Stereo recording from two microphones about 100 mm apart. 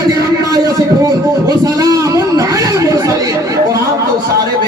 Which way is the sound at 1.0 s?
35° right (ahead or behind).